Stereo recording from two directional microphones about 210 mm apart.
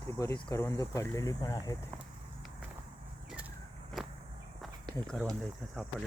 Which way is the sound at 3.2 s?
5° right (ahead or behind).